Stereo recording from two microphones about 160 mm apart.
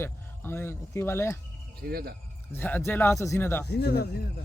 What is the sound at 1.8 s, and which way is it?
Speech, 75° right (ahead or behind).